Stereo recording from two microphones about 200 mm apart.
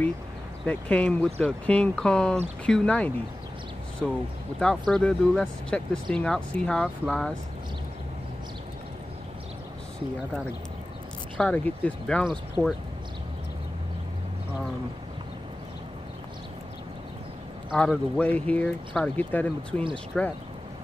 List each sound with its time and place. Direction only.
0.7 s speech: 5° left (ahead or behind)
4.6 s speech: 5° left (ahead or behind)
11.3 s speech: 5° left (ahead or behind)
17.7 s speech: 5° left (ahead or behind)